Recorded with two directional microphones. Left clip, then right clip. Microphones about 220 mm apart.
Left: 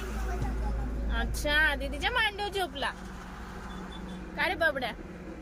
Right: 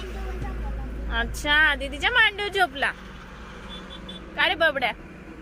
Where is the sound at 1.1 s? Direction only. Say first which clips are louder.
Right 7 dB; 15° right (ahead or behind).